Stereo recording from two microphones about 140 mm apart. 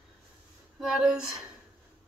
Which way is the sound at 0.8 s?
5° right (ahead or behind).